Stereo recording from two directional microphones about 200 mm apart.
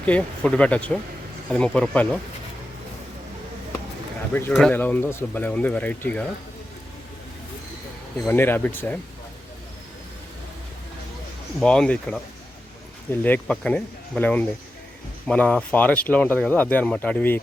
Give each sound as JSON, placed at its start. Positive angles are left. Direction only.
{"t": 0.0, "sound": "speech", "side_deg": 5}
{"t": 4.4, "sound": "speech", "side_deg": 5}
{"t": 8.3, "sound": "speech", "side_deg": 10}
{"t": 11.6, "sound": "speech", "side_deg": 5}